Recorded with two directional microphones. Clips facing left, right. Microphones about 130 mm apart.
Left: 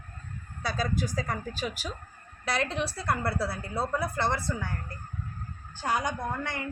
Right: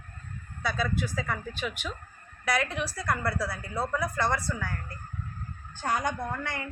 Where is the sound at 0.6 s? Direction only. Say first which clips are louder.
Even; 35° left (ahead or behind).